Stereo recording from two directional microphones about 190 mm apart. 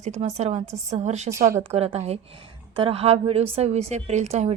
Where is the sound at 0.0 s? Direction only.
35° right (ahead or behind).